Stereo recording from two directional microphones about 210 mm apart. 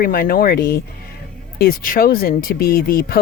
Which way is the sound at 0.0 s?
45° left (ahead or behind).